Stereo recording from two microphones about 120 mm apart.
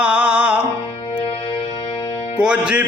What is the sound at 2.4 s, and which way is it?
Music, 10° right (ahead or behind).